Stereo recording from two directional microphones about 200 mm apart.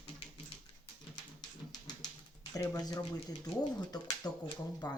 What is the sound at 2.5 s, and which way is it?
Speech, 15° left (ahead or behind).